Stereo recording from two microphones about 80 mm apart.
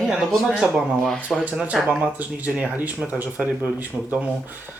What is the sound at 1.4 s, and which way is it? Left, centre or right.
A man's voice, centre.